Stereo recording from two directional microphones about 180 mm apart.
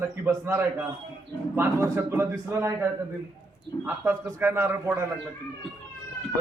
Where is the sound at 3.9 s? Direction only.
15° right (ahead or behind).